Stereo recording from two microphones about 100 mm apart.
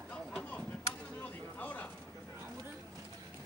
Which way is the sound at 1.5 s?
15° left (ahead or behind).